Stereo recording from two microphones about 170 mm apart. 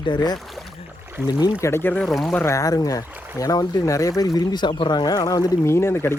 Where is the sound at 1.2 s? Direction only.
20° left (ahead or behind).